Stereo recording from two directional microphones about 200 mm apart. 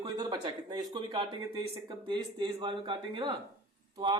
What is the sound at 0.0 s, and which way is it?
Speech, 20° right (ahead or behind).